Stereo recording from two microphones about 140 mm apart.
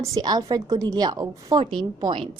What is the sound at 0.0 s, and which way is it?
A woman's voice, 25° right (ahead or behind).